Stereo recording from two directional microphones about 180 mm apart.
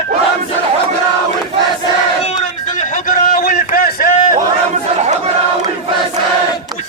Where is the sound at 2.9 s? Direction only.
50° left (ahead or behind).